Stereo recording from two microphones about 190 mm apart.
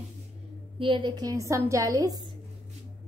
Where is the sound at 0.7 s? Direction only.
25° right (ahead or behind).